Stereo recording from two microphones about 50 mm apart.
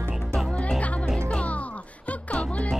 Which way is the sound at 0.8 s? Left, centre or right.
Left.